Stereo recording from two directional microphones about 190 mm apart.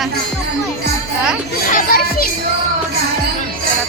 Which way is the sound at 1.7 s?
45° left (ahead or behind).